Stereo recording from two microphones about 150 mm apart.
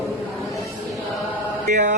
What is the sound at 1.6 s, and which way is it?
Mantra, 55° right (ahead or behind).